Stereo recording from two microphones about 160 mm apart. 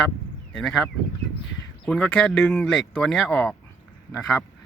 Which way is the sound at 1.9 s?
5° left (ahead or behind).